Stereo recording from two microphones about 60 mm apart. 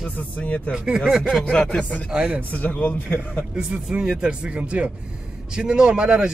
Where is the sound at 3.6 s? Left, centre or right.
Centre.